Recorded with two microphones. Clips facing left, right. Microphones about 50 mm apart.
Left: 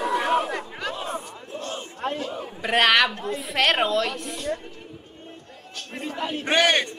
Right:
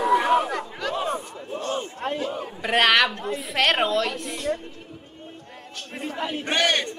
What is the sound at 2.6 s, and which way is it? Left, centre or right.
A woman's voice, centre.